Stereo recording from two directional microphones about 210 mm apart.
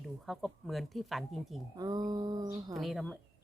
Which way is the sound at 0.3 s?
Centre (ahead or behind).